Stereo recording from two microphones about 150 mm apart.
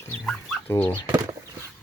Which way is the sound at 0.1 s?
10° left (ahead or behind).